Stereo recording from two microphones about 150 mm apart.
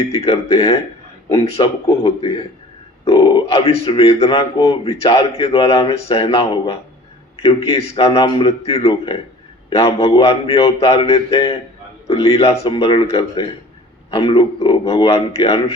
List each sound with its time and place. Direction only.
0.0 s speech: 40° left (ahead or behind)
1.4 s speech: 40° left (ahead or behind)